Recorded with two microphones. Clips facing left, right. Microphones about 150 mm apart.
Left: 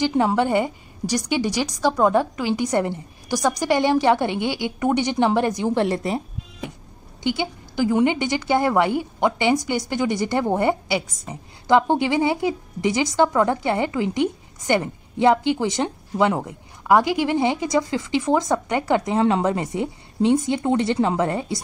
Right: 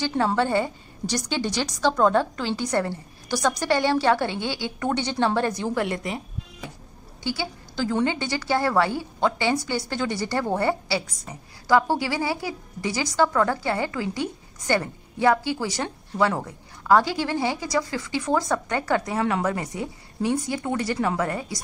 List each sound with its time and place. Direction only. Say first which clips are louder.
0.0 s a woman's voice: left 4 dB; 15° left (ahead or behind)
5.8 s a woman's voice: left 5 dB; 35° left (ahead or behind)
7.2 s a woman's voice: left 5 dB; 15° left (ahead or behind)